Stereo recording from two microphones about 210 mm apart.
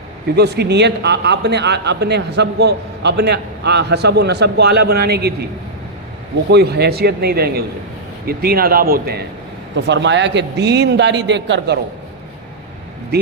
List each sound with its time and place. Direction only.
0.3 s speech: 50° right (ahead or behind)
6.5 s speech: 50° right (ahead or behind)
9.7 s a man's voice: 55° right (ahead or behind)